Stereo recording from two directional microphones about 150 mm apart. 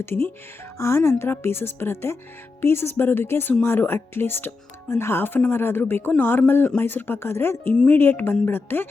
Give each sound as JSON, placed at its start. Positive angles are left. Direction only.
{"t": 0.0, "sound": "speech", "side_deg": 15}